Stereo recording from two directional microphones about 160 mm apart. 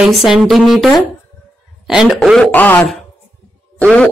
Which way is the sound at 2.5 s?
10° left (ahead or behind).